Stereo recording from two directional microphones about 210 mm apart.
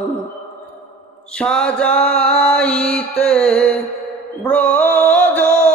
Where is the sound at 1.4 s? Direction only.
5° left (ahead or behind).